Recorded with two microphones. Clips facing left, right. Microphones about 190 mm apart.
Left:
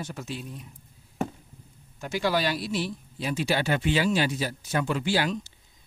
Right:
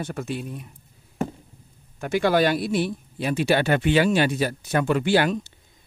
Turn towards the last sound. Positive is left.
turn(degrees=-60)  # may be behind; listen again after turning